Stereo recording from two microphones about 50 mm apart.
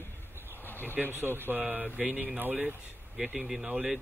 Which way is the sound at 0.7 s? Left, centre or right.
Left.